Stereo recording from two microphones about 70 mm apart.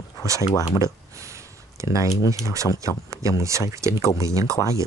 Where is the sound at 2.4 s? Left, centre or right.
Right.